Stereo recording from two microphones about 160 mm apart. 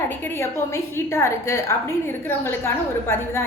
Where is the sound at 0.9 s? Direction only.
15° left (ahead or behind).